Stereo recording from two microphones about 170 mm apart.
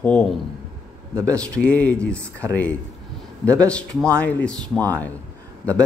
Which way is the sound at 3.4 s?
5° left (ahead or behind).